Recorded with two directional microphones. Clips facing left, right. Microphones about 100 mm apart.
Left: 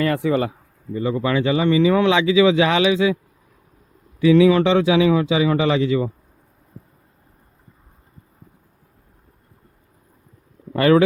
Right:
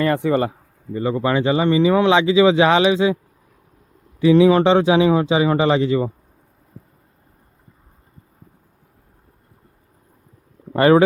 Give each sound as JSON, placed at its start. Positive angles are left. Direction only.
{"t": 0.3, "sound": "speech", "side_deg": -40}
{"t": 4.2, "sound": "speech", "side_deg": -35}
{"t": 10.7, "sound": "speech", "side_deg": -35}